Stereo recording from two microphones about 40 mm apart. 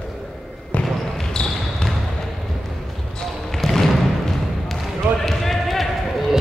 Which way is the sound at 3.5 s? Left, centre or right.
Centre.